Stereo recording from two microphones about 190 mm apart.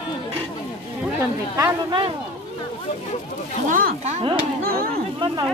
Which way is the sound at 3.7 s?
45° right (ahead or behind).